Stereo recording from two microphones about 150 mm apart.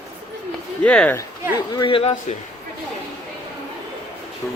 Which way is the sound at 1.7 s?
35° left (ahead or behind).